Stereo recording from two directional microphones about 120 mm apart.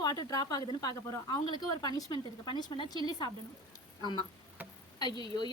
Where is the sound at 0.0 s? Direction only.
35° left (ahead or behind).